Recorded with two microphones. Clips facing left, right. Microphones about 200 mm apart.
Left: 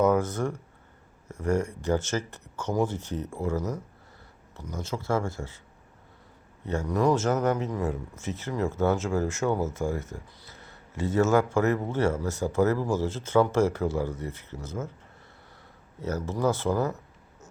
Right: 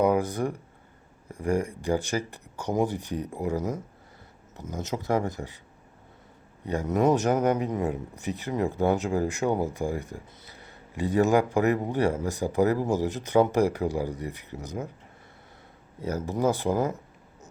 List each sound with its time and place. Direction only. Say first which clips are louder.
0.0 s speech: even; 15° right (ahead or behind)
6.7 s speech: right 1 dB; 20° right (ahead or behind)
16.0 s speech: right 1 dB; 15° right (ahead or behind)